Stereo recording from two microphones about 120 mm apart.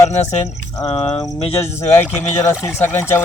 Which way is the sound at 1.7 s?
20° left (ahead or behind).